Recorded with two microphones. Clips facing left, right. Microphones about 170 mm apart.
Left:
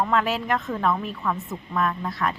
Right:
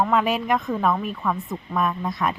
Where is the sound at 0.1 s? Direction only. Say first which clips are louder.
Right 2 dB; 15° right (ahead or behind).